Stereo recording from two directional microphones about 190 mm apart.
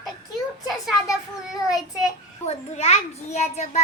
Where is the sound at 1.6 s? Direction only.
Centre (ahead or behind).